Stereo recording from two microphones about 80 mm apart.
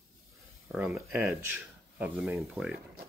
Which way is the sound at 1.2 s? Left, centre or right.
Right.